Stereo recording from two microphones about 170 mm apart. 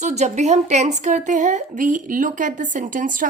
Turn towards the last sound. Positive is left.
turn(degrees=-50)  # may be behind; listen again after turning